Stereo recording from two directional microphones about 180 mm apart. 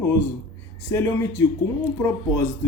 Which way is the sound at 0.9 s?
15° left (ahead or behind).